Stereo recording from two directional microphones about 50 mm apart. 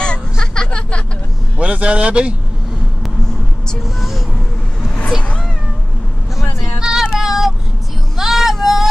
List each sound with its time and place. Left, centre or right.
0.0 s a sound: centre
1.6 s speech: right
6.8 s child singing: centre